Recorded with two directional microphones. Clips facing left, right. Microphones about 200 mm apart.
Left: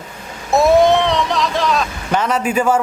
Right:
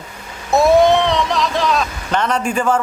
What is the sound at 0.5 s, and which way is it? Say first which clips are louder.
Speech: even; centre (ahead or behind).